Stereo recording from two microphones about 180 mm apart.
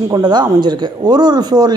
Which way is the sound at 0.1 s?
25° right (ahead or behind).